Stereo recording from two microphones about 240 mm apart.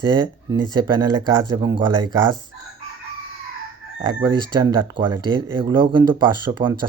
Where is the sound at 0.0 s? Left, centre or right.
Centre.